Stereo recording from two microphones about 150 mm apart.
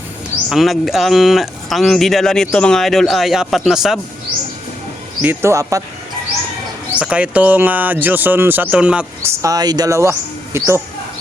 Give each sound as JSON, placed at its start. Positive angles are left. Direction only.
{"t": 0.5, "sound": "speech", "side_deg": 0}
{"t": 5.2, "sound": "speech", "side_deg": -15}
{"t": 6.9, "sound": "speech", "side_deg": -10}
{"t": 9.4, "sound": "speech", "side_deg": -25}